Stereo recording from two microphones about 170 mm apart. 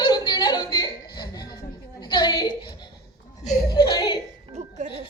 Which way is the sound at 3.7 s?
25° left (ahead or behind).